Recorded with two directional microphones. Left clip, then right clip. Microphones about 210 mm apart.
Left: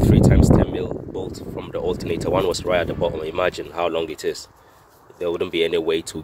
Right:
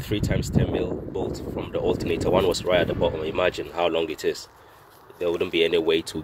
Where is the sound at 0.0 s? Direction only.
5° left (ahead or behind).